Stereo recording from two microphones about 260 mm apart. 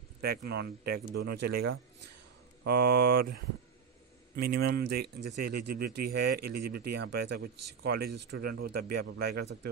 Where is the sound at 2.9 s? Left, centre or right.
Right.